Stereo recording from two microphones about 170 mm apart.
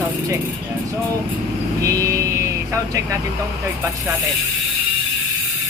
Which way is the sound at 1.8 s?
20° right (ahead or behind).